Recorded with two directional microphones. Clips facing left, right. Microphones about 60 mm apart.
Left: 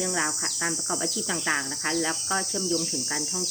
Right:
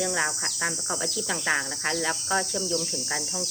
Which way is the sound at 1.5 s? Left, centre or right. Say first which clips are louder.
Right 2 dB; centre.